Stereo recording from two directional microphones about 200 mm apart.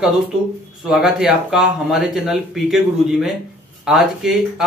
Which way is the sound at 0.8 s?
5° right (ahead or behind).